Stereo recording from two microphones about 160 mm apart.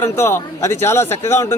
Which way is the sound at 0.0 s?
15° left (ahead or behind).